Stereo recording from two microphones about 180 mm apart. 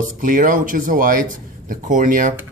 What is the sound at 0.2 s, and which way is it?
Speech, 50° right (ahead or behind).